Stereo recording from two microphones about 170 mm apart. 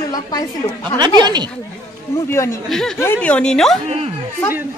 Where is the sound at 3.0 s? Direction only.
10° left (ahead or behind).